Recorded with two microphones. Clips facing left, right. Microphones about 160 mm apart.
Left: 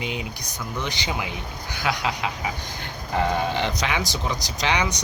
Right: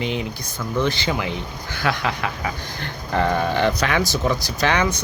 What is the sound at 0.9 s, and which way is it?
Speech, 15° left (ahead or behind).